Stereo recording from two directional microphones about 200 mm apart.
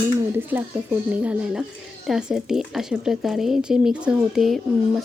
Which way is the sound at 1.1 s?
5° right (ahead or behind).